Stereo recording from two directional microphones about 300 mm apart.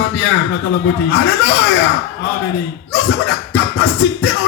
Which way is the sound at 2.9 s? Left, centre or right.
Left.